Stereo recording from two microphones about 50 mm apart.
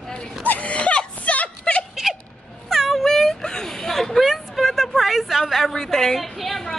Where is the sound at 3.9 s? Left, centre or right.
Centre.